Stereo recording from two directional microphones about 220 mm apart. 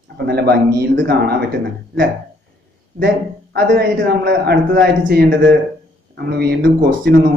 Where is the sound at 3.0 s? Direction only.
45° right (ahead or behind).